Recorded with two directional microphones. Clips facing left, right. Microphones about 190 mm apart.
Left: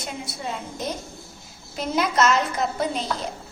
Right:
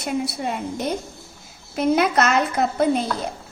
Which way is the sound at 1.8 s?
60° right (ahead or behind).